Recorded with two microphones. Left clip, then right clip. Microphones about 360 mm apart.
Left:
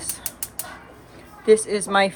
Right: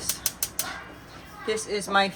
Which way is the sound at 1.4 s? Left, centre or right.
Centre.